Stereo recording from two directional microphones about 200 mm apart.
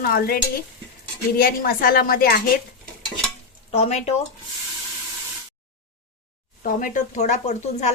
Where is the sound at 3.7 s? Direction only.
30° left (ahead or behind).